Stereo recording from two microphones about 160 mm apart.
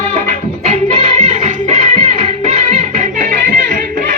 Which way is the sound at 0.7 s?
45° right (ahead or behind).